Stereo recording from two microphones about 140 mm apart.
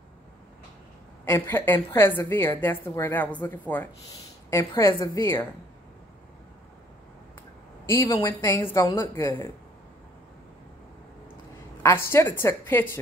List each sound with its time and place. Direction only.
1.2 s a woman's voice: 15° left (ahead or behind)
7.8 s a woman's voice: 20° left (ahead or behind)
11.8 s a woman's voice: 20° left (ahead or behind)